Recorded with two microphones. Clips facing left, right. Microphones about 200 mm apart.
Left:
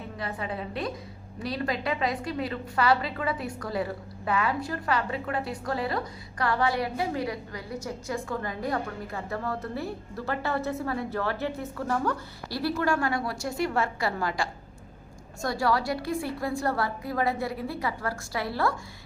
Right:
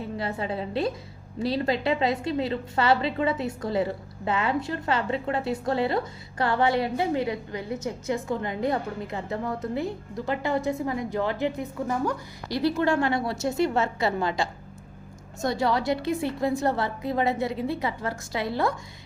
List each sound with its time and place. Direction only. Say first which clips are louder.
0.2 s a woman's voice: right 2 dB; 30° right (ahead or behind)